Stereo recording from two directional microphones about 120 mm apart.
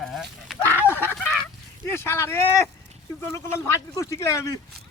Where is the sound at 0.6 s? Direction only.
20° right (ahead or behind).